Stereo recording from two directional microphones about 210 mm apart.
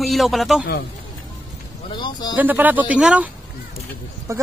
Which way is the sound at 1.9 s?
20° left (ahead or behind).